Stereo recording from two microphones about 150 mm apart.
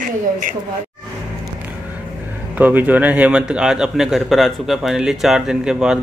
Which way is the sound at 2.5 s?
10° right (ahead or behind).